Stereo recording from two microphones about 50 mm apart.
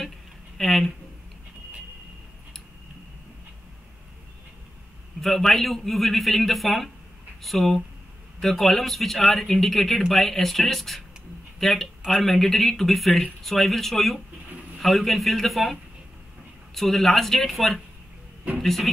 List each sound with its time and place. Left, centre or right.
0.6 s speech: centre
5.2 s speech: centre